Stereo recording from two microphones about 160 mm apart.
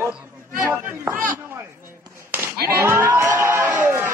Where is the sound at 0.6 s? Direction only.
15° right (ahead or behind).